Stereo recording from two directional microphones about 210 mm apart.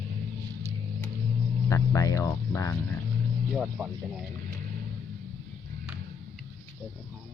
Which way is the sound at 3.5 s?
5° right (ahead or behind).